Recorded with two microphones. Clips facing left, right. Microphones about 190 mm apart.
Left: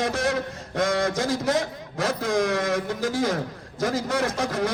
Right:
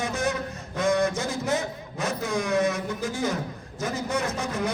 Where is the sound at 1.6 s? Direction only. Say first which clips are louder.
Left 3 dB; 90° left.